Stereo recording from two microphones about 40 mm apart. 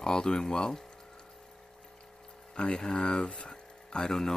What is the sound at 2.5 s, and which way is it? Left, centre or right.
Speech, left.